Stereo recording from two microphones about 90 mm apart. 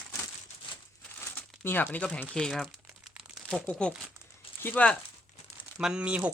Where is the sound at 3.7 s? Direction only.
10° left (ahead or behind).